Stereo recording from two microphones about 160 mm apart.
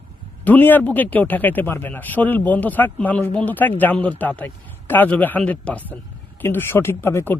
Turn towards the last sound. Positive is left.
turn(degrees=15)  # may be behind; listen again after turning